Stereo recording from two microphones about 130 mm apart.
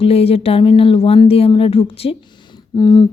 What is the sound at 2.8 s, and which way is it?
Humming, 35° left (ahead or behind).